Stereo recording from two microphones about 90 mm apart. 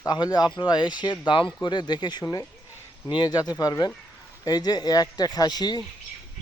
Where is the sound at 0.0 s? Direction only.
50° left (ahead or behind).